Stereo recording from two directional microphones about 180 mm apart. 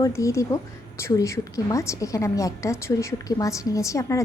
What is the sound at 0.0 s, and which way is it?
A woman's voice, 15° left (ahead or behind).